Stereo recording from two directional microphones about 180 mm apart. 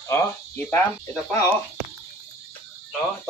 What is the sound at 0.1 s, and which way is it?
Speech, 10° left (ahead or behind).